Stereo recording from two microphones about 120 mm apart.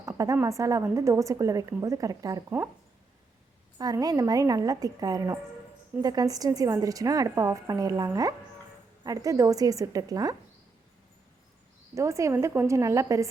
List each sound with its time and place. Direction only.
0.1 s a sound: 25° right (ahead or behind)
0.3 s a woman's voice: 25° right (ahead or behind)
3.8 s a woman's voice: 30° right (ahead or behind)
11.9 s a woman's voice: 25° right (ahead or behind)